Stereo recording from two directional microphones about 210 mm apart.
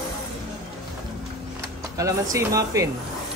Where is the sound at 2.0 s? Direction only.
15° right (ahead or behind).